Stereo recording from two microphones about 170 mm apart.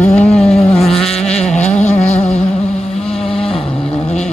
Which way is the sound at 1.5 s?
40° left (ahead or behind).